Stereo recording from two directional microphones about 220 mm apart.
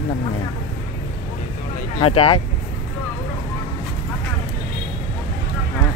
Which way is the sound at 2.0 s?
25° left (ahead or behind).